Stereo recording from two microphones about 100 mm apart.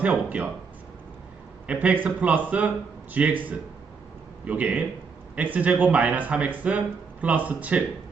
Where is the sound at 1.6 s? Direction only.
15° right (ahead or behind).